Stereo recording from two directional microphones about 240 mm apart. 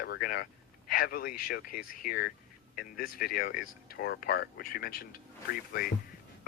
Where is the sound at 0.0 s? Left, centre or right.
Left.